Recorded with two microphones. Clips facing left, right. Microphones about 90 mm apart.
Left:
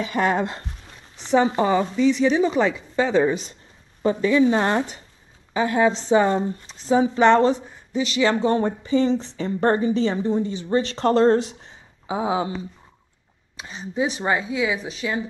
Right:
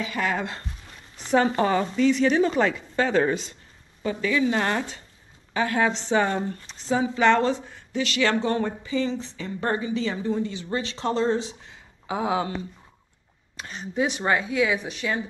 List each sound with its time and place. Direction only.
0.0 s a woman's voice: 35° left (ahead or behind)
1.4 s a woman's voice: 10° left (ahead or behind)
4.0 s a woman's voice: 30° left (ahead or behind)
8.5 s a woman's voice: 30° left (ahead or behind)
10.7 s speech: 40° left (ahead or behind)
12.1 s speech: 20° left (ahead or behind)
13.6 s a woman's voice: 5° left (ahead or behind)
14.2 s a woman's voice: 20° left (ahead or behind)